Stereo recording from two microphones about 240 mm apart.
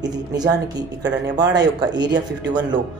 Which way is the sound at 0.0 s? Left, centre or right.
Centre.